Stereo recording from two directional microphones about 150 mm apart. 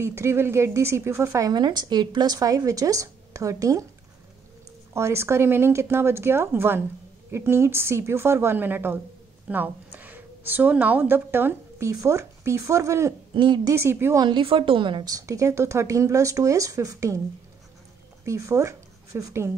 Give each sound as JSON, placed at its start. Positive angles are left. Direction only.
{"t": 0.0, "sound": "a woman's voice", "side_deg": -15}
{"t": 4.9, "sound": "a woman's voice", "side_deg": -20}
{"t": 13.3, "sound": "speech", "side_deg": -30}
{"t": 13.7, "sound": "speech", "side_deg": -15}
{"t": 14.2, "sound": "a woman's voice", "side_deg": -35}
{"t": 18.2, "sound": "speech", "side_deg": -20}